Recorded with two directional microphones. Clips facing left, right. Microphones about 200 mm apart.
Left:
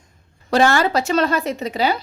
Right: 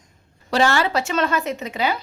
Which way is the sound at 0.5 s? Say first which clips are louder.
Left 3 dB; 45° left (ahead or behind).